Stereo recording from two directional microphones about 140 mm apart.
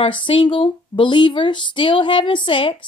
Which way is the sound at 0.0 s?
35° left (ahead or behind).